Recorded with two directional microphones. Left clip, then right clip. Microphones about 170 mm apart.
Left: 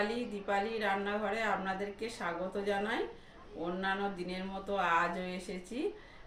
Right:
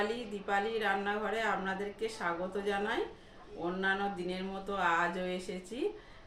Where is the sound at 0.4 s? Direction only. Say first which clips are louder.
Right 2 dB; 15° right (ahead or behind).